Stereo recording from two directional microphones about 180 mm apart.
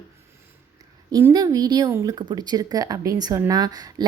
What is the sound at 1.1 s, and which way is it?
A woman's voice, 20° right (ahead or behind).